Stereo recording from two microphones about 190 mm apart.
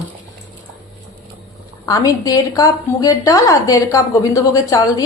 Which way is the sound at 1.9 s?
20° left (ahead or behind).